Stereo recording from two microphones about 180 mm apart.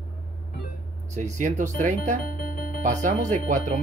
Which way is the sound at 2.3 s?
60° left (ahead or behind).